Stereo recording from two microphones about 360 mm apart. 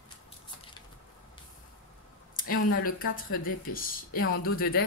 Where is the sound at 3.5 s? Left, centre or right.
Left.